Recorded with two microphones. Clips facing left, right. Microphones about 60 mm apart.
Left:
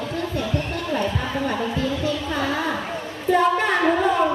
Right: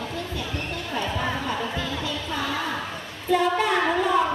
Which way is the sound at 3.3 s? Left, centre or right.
Left.